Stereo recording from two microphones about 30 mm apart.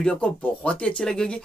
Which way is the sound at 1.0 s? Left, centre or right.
Left.